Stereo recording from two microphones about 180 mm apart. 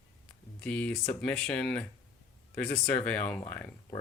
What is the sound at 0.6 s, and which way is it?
Speech, 5° left (ahead or behind).